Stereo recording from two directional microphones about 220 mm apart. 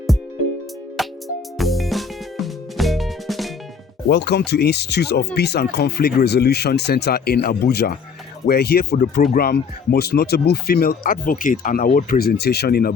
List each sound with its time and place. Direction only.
1.0 s music: centre (ahead or behind)
4.1 s speech: 50° left (ahead or behind)